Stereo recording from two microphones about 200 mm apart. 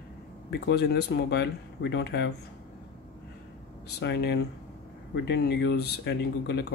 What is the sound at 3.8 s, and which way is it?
Speech, 55° left (ahead or behind).